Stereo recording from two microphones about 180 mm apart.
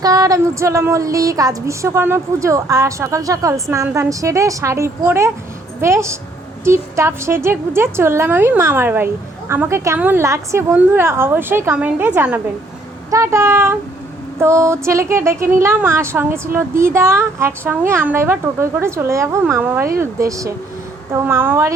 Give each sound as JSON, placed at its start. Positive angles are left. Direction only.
{"t": 0.0, "sound": "a woman's voice", "side_deg": -20}